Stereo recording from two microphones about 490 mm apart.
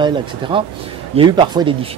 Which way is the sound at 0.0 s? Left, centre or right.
Centre.